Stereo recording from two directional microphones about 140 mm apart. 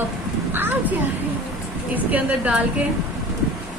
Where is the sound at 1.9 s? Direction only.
10° right (ahead or behind).